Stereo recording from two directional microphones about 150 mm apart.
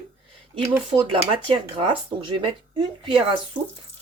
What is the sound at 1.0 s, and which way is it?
Speech, 35° right (ahead or behind).